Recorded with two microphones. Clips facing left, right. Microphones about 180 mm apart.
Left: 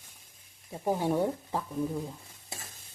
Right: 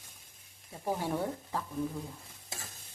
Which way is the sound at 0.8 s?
20° left (ahead or behind).